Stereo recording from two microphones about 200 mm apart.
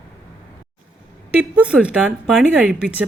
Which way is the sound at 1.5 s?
5° right (ahead or behind).